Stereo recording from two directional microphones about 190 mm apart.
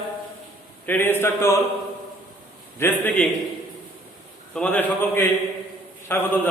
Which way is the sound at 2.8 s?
10° left (ahead or behind).